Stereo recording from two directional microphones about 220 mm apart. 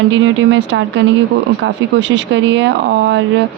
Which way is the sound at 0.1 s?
55° right (ahead or behind).